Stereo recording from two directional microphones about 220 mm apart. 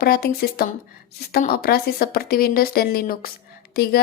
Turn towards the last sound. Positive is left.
turn(degrees=45)  # may be behind; listen again after turning